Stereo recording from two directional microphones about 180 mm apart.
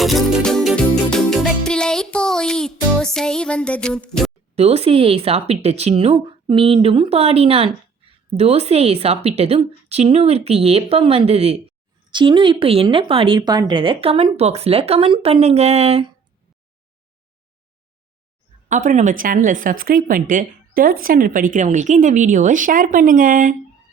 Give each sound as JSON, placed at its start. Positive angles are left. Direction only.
{"t": 0.0, "sound": "music", "side_deg": 0}
{"t": 4.5, "sound": "speech", "side_deg": -35}
{"t": 18.7, "sound": "speech", "side_deg": -45}